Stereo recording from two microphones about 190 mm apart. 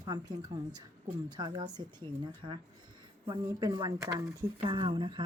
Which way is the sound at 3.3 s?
20° right (ahead or behind).